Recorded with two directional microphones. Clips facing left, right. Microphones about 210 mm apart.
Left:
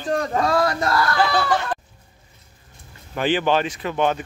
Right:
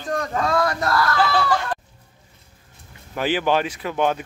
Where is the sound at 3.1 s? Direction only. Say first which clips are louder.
Left 1 dB; 5° right (ahead or behind).